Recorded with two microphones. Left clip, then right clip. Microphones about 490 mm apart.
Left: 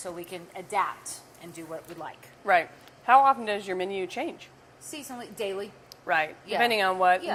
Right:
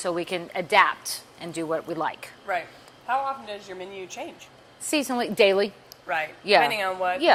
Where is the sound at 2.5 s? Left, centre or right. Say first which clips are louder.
Left 6 dB; left.